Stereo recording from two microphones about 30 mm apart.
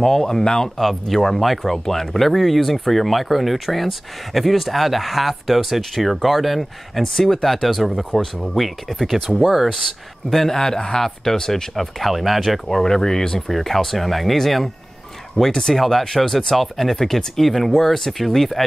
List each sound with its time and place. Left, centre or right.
0.0 s speech: centre
0.4 s speech: left
0.7 s speech: centre
7.2 s speech: centre
7.6 s speech: centre
10.3 s speech: centre
11.7 s speech: centre
12.8 s speech: centre
13.5 s speech: centre